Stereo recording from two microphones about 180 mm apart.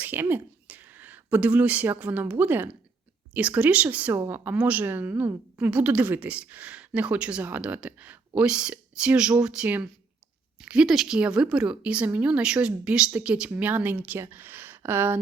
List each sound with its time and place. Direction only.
0.0 s speech: 10° right (ahead or behind)